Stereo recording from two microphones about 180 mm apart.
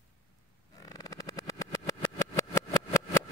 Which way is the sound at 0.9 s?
20° left (ahead or behind).